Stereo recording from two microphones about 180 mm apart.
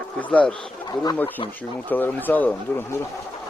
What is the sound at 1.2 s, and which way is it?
Speech, 10° left (ahead or behind).